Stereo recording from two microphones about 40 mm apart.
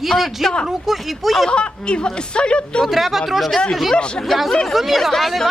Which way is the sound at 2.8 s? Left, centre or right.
Centre.